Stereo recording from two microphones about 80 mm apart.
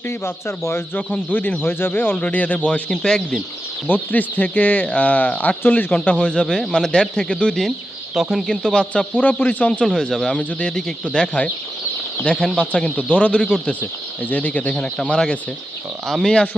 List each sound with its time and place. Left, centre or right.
0.1 s speech: left
1.3 s a man's voice: left
3.8 s a man's voice: left
8.1 s a man's voice: centre
9.8 s a man's voice: centre